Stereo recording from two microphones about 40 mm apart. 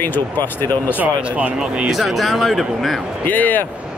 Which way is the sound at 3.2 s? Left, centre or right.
Left.